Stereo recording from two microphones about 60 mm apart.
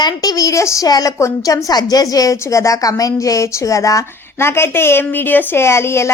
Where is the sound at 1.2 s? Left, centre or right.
Left.